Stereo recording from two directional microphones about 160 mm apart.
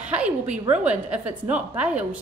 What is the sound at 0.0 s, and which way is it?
A woman's voice, 10° right (ahead or behind).